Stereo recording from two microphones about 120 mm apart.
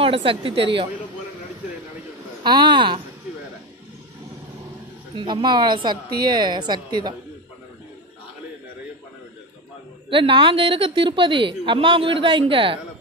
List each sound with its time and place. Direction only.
0.0 s a woman's voice: 50° right (ahead or behind)
2.4 s a woman's voice: 40° right (ahead or behind)
5.1 s a woman's voice: 40° right (ahead or behind)
10.0 s a woman's voice: 45° right (ahead or behind)